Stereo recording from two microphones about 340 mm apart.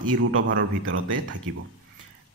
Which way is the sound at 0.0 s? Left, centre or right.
Right.